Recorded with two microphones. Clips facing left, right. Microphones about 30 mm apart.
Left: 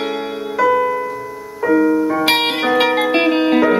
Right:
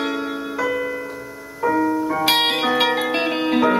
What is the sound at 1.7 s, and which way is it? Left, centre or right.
Music, left.